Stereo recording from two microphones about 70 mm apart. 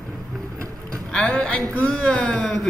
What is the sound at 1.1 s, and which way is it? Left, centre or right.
A man's voice, centre.